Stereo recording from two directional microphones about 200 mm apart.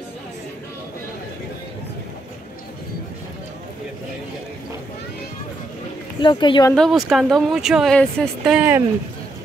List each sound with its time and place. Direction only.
6.2 s speech: 25° left (ahead or behind)
6.7 s speech: centre (ahead or behind)
8.5 s speech: 10° right (ahead or behind)